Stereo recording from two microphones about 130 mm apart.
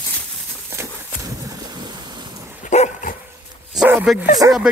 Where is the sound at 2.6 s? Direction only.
70° left (ahead or behind).